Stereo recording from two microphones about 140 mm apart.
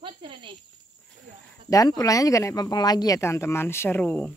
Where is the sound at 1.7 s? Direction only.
25° left (ahead or behind).